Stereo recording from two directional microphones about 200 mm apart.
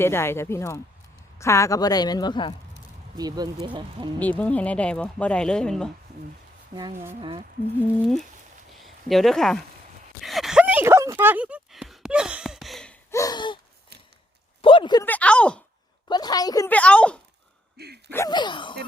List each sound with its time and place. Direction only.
0.0 s a woman's voice: 10° left (ahead or behind)
3.2 s speech: 20° right (ahead or behind)
4.2 s speech: 10° left (ahead or behind)
7.2 s speech: 25° right (ahead or behind)
9.0 s speech: centre (ahead or behind)
10.2 s a sound: centre (ahead or behind); by 13.6 s 20° left (ahead or behind)
14.6 s a sound: 25° left (ahead or behind)
15.0 s a sound: 5° left (ahead or behind)
16.0 s a woman's voice: 20° left (ahead or behind)
16.6 s speech: 5° left (ahead or behind)
17.7 s a sound: 55° right (ahead or behind)
18.1 s a woman's voice: 15° left (ahead or behind)